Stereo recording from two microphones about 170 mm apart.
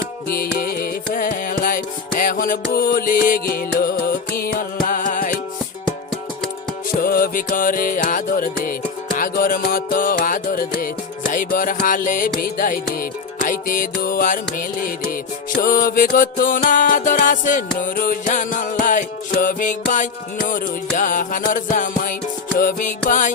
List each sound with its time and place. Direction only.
0.3 s music: 60° left (ahead or behind)
7.0 s music: 60° left (ahead or behind)